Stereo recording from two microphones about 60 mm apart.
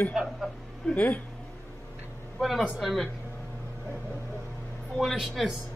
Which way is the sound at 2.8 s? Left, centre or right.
Centre.